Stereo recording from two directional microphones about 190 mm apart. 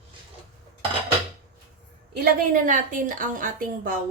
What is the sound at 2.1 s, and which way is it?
A woman's voice, 50° right (ahead or behind).